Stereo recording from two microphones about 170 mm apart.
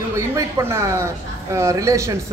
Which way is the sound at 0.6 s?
15° right (ahead or behind).